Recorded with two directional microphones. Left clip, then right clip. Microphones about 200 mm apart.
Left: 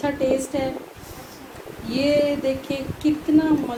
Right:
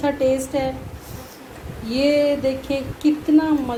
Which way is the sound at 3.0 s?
45° right (ahead or behind).